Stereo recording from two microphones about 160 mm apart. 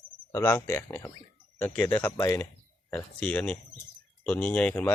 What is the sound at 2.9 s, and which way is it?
Speech, 10° left (ahead or behind).